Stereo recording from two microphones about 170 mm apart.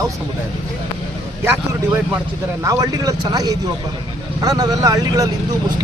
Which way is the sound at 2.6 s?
20° right (ahead or behind).